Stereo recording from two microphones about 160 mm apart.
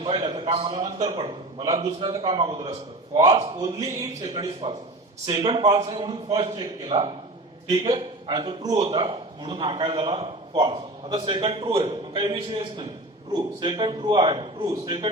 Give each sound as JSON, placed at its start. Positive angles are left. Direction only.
{"t": 0.0, "sound": "a man's voice", "side_deg": -25}